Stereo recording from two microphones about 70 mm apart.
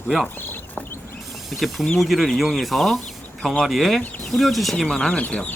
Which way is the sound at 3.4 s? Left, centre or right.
Centre.